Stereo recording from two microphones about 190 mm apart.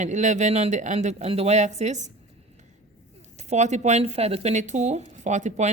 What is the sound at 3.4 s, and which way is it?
A woman's voice, 35° right (ahead or behind).